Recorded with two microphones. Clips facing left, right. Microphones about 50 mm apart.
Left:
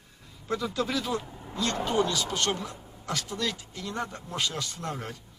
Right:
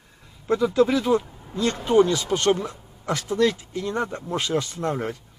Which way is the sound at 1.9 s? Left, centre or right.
Right.